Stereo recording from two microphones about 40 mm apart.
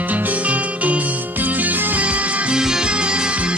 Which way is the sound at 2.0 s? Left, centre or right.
Right.